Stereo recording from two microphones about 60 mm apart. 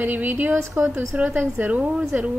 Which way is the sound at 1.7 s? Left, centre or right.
Centre.